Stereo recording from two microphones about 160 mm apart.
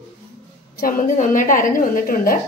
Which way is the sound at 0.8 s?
55° left (ahead or behind).